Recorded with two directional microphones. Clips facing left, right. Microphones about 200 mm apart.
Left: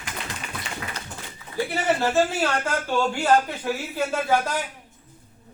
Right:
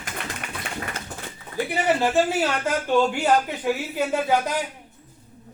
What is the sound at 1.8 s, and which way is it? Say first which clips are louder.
A man's voice: right 1 dB; 15° right (ahead or behind).